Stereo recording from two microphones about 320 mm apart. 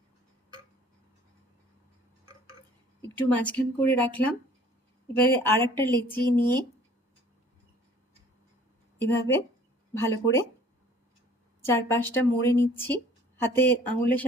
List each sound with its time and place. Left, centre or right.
3.2 s a woman's voice: centre
5.1 s a woman's voice: centre
9.0 s a woman's voice: centre
11.6 s a woman's voice: centre